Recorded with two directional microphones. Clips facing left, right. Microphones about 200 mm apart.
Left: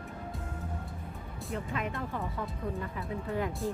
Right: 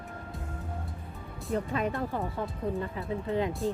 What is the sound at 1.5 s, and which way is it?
Speech, 35° right (ahead or behind).